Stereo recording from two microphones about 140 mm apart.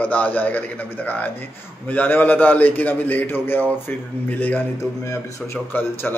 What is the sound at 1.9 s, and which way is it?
A man's voice, 10° left (ahead or behind).